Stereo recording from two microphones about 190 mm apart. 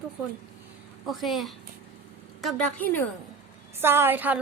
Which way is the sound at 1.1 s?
Centre (ahead or behind).